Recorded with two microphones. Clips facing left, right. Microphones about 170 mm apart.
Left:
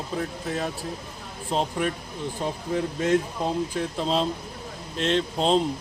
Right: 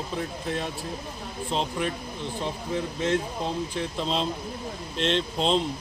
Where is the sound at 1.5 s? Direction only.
45° left (ahead or behind).